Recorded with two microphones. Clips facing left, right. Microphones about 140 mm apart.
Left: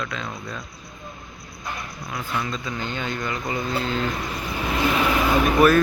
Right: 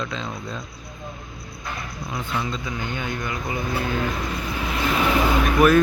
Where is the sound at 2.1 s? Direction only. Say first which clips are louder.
Even; 20° right (ahead or behind).